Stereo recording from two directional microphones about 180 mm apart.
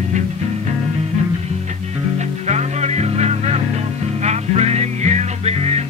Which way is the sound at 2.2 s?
40° right (ahead or behind).